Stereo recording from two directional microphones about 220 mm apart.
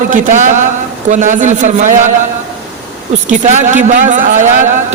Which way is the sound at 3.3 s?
35° right (ahead or behind).